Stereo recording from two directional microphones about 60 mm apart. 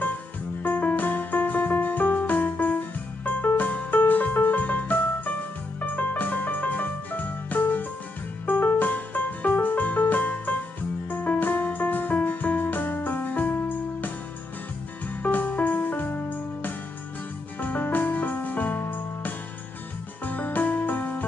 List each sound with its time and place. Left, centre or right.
0.6 s music: left
15.2 s music: left